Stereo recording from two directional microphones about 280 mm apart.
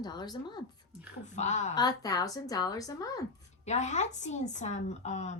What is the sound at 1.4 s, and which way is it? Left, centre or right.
Speech, left.